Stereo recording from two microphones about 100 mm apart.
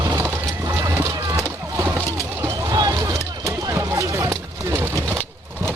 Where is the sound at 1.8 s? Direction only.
25° right (ahead or behind).